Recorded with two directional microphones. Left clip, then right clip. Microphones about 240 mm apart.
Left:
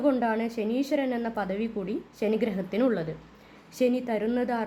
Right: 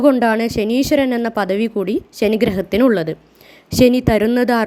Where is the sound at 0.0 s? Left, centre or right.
Right.